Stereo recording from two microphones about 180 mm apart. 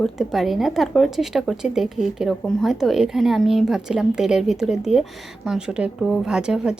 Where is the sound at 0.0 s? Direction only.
Centre (ahead or behind).